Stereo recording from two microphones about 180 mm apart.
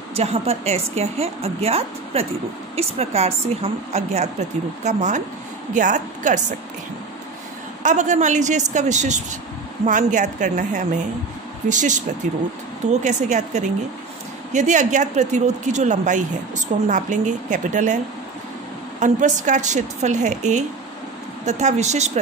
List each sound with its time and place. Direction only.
0.1 s a woman's voice: 35° right (ahead or behind)
7.8 s a woman's voice: 45° right (ahead or behind)